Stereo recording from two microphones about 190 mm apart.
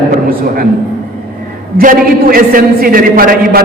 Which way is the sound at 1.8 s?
50° right (ahead or behind).